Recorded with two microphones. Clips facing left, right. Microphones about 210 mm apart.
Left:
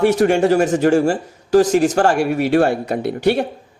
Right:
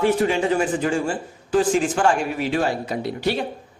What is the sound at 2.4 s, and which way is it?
Speech, 65° left (ahead or behind).